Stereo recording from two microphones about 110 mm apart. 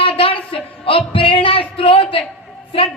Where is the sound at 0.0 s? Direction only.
60° left (ahead or behind).